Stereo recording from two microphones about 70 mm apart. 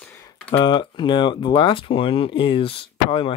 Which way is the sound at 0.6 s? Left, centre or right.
Left.